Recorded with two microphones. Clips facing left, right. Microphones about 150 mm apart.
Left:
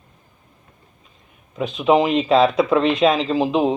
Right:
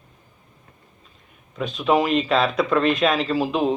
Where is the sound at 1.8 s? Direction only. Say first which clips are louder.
Left 3 dB; 20° left (ahead or behind).